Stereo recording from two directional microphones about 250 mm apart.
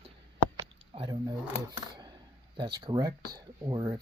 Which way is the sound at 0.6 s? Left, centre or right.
Right.